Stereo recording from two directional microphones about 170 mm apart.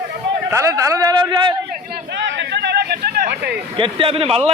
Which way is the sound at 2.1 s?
90° right.